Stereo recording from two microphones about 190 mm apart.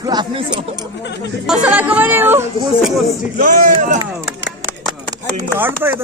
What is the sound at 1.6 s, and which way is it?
Speech, 10° right (ahead or behind).